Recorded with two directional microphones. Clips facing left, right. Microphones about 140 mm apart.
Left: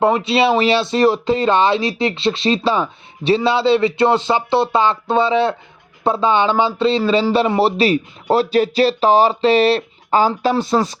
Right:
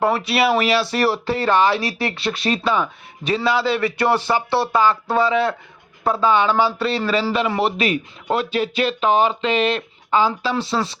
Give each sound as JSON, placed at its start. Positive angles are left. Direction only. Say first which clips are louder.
{"t": 0.0, "sound": "speech", "louder": "left 3 dB", "side_deg": 25}